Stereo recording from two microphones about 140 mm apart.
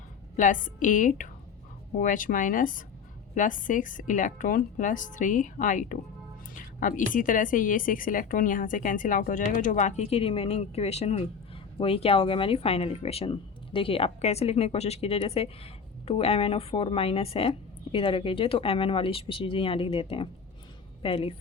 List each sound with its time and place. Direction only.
0.3 s a woman's voice: 70° left (ahead or behind); by 21.3 s 40° left (ahead or behind)